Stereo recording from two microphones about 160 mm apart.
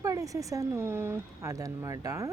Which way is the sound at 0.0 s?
20° right (ahead or behind).